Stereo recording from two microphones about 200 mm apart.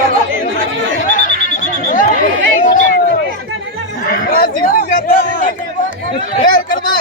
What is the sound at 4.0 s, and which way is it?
Chatter, 45° left (ahead or behind).